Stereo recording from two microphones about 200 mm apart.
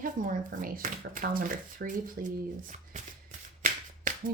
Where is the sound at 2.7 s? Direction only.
40° right (ahead or behind).